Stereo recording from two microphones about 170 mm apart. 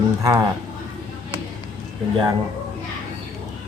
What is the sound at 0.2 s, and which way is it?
Speech, 20° right (ahead or behind).